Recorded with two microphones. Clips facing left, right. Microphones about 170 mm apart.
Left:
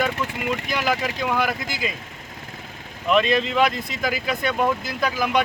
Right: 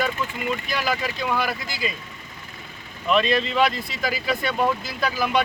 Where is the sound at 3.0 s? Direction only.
15° left (ahead or behind).